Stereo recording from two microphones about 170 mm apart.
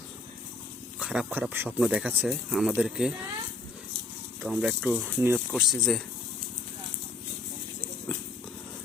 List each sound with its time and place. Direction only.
0.9 s speech: 5° right (ahead or behind)
4.4 s speech: 10° right (ahead or behind)
5.5 s speech: centre (ahead or behind)